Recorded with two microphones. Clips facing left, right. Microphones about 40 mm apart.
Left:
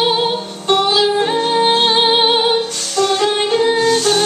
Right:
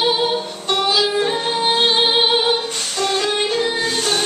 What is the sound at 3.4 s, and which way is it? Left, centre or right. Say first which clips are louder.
Music: left 5 dB; left.